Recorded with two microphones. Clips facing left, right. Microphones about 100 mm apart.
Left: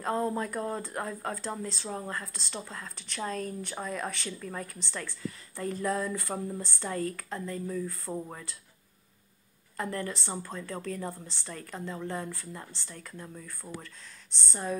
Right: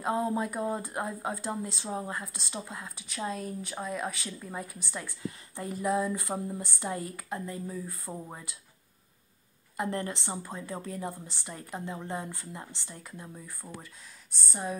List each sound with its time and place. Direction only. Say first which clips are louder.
0.0 s speech: right 1 dB; 10° right (ahead or behind)
9.8 s speech: right 1 dB; 20° right (ahead or behind)